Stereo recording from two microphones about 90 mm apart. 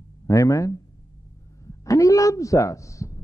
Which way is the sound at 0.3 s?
35° left (ahead or behind).